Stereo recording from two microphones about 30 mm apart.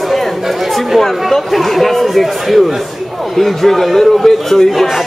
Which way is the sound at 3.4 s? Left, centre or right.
Centre.